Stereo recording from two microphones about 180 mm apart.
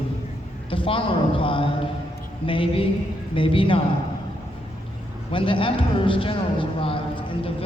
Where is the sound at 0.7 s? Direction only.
30° left (ahead or behind).